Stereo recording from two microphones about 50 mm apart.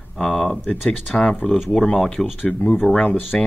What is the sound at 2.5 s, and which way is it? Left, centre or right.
Speech, centre.